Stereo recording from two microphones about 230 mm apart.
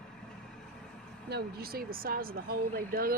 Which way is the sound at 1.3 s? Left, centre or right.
Right.